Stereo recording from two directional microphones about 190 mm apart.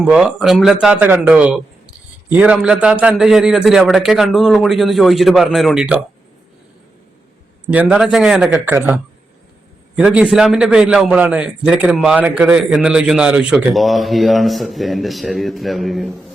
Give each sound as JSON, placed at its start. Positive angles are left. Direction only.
{"t": 0.0, "sound": "a man's voice", "side_deg": -5}
{"t": 7.7, "sound": "a man's voice", "side_deg": -10}